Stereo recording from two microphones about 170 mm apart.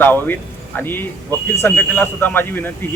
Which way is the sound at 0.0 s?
10° left (ahead or behind).